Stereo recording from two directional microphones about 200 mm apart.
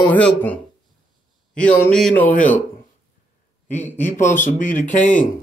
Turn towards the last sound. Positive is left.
turn(degrees=40)  # may be behind; listen again after turning